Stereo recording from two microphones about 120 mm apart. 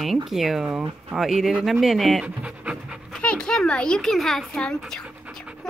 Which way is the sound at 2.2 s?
10° right (ahead or behind).